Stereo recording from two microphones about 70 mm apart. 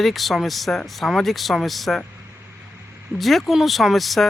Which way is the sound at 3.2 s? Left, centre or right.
Centre.